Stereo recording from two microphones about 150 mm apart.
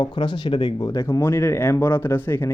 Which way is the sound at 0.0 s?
30° left (ahead or behind).